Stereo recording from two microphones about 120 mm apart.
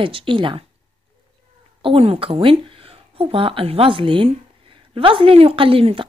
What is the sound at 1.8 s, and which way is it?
Speech, 50° right (ahead or behind).